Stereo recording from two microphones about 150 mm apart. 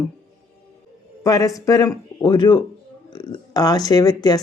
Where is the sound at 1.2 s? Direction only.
25° left (ahead or behind).